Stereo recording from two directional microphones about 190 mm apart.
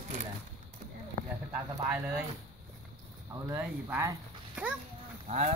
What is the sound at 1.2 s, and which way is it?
Speech, 10° right (ahead or behind).